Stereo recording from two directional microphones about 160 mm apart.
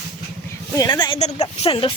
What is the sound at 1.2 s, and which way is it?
Speech, 45° left (ahead or behind).